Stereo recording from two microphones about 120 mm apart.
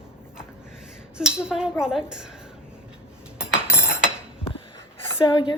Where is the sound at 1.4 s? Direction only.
5° right (ahead or behind).